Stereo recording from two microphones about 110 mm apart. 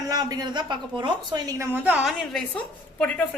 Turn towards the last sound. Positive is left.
turn(degrees=10)  # may be behind; listen again after turning